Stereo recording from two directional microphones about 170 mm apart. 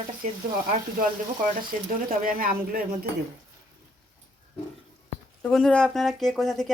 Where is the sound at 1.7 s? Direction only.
50° right (ahead or behind).